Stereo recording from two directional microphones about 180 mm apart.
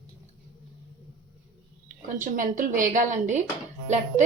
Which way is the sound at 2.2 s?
45° right (ahead or behind).